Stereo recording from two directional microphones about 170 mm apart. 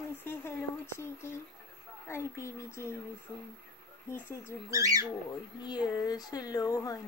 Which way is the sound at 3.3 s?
15° right (ahead or behind).